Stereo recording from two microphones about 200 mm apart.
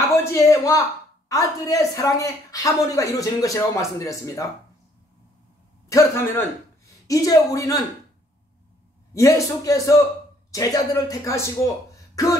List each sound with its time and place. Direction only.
0.1 s a sound: 15° left (ahead or behind)
1.3 s speech: 15° left (ahead or behind)
5.9 s speech: 15° left (ahead or behind)
9.1 s speech: 15° left (ahead or behind)